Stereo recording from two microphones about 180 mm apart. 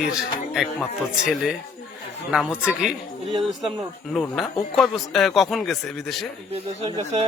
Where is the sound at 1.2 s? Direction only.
Centre (ahead or behind).